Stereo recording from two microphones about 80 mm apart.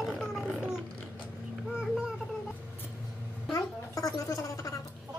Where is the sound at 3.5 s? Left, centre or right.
Left.